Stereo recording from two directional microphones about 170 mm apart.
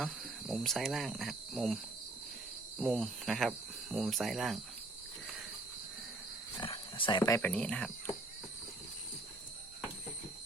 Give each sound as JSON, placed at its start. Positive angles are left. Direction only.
{"t": 0.0, "sound": "speech", "side_deg": 0}
{"t": 6.6, "sound": "a sound", "side_deg": 30}
{"t": 7.5, "sound": "speech", "side_deg": 5}